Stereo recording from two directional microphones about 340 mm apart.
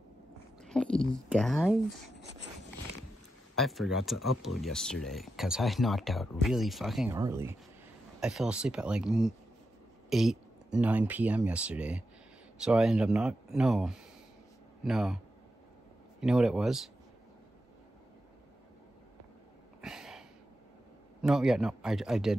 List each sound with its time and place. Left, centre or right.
0.6 s speech: centre
2.1 s a sound: right
3.5 s speech: centre
16.2 s speech: centre
19.8 s a sound: centre
21.2 s speech: centre